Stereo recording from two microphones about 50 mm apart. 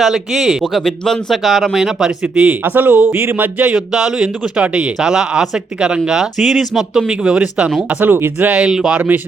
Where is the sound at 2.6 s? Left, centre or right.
Right.